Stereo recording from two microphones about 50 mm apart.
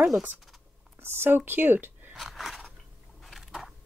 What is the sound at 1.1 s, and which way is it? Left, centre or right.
Speech, right.